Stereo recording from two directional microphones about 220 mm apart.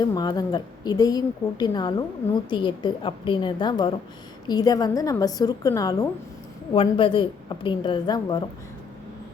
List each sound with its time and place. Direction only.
0.0 s a woman's voice: 20° left (ahead or behind)